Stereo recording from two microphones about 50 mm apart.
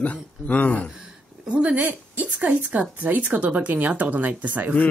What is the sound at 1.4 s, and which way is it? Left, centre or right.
Speech, right.